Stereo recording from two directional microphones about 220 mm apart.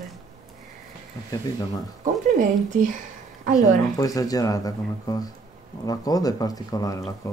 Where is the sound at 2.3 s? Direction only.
35° right (ahead or behind).